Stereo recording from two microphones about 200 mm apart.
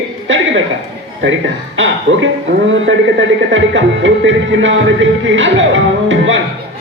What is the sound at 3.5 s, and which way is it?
A man's voice, 70° right (ahead or behind).